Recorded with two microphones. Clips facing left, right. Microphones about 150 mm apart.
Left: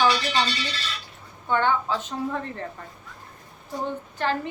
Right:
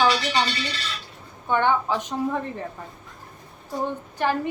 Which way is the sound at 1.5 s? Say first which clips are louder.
Right 2 dB; 15° right (ahead or behind).